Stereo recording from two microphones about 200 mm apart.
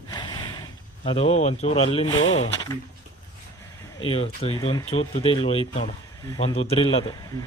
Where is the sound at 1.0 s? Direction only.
30° left (ahead or behind).